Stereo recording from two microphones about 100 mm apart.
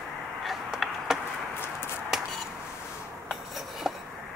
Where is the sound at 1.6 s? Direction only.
20° left (ahead or behind).